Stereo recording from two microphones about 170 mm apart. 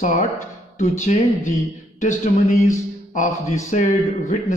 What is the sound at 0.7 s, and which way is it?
Speech, 45° left (ahead or behind).